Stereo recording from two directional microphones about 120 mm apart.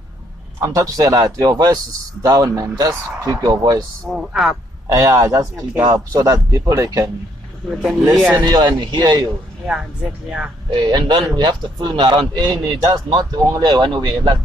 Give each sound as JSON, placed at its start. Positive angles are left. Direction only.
{"t": 0.6, "sound": "a man's voice", "side_deg": -25}
{"t": 4.0, "sound": "a man's voice", "side_deg": 0}
{"t": 4.8, "sound": "a man's voice", "side_deg": -30}
{"t": 7.7, "sound": "a man's voice", "side_deg": 0}
{"t": 8.4, "sound": "speech", "side_deg": -35}
{"t": 9.7, "sound": "speech", "side_deg": -5}
{"t": 10.7, "sound": "speech", "side_deg": -35}